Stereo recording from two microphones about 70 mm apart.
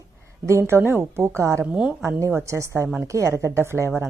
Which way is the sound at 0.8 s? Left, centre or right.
Right.